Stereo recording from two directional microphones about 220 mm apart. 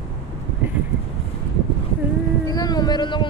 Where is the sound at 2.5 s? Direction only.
15° left (ahead or behind).